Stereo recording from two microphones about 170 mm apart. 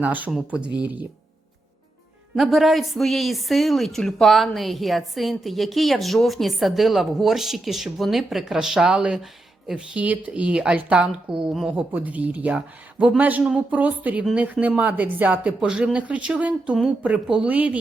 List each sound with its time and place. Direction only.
0.0 s speech: 10° right (ahead or behind)
2.3 s speech: centre (ahead or behind)